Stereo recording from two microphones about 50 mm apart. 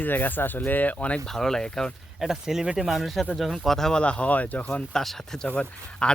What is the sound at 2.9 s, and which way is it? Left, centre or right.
Speech, centre.